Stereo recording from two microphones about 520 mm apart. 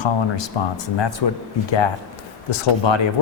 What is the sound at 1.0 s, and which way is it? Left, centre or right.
Speech, left.